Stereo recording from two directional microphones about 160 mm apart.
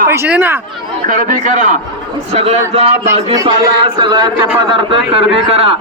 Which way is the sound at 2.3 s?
40° right (ahead or behind).